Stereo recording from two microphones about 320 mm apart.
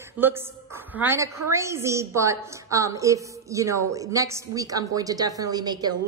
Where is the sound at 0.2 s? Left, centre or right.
Centre.